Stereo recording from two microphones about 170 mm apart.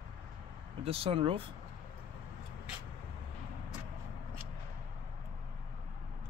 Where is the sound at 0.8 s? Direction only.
35° right (ahead or behind).